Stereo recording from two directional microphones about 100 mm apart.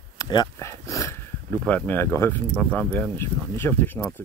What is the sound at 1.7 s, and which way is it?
Speech, 20° left (ahead or behind).